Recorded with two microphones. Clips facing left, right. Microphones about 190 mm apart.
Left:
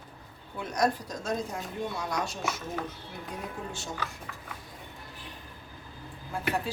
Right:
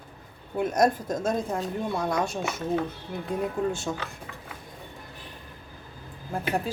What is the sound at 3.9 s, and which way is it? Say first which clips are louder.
Speech: right 5 dB; 70° right (ahead or behind).